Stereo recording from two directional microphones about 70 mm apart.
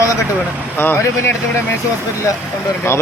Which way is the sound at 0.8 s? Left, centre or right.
Left.